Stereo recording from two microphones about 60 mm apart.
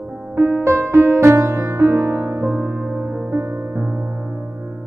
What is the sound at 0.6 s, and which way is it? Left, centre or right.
Music, right.